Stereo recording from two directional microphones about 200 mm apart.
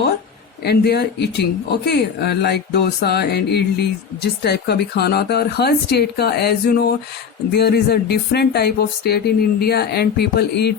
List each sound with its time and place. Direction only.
0.6 s speech: 55° left (ahead or behind)